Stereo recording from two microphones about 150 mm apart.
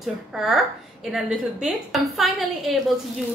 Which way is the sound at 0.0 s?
Centre (ahead or behind).